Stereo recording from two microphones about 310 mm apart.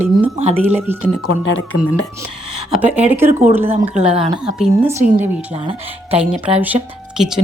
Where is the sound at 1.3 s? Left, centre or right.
Left.